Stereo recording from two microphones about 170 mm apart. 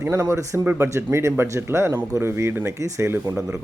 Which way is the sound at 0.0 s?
15° right (ahead or behind).